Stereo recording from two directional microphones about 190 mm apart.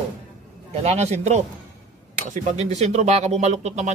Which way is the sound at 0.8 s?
35° right (ahead or behind).